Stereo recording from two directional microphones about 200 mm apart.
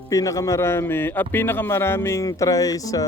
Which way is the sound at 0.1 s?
15° left (ahead or behind).